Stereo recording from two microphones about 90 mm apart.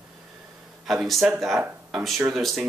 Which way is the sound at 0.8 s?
Centre (ahead or behind).